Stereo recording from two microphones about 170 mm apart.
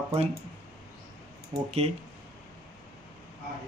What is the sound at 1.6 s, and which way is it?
Speech, 40° right (ahead or behind).